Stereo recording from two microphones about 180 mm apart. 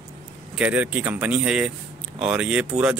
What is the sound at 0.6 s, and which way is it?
Speech, 10° right (ahead or behind).